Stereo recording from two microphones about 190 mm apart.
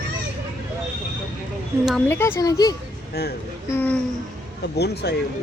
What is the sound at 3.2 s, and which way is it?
Speech, 55° left (ahead or behind).